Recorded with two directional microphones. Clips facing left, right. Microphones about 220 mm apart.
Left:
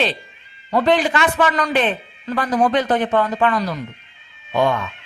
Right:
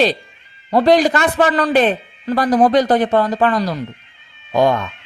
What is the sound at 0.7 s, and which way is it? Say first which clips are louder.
Speech: right 4 dB; 35° right (ahead or behind).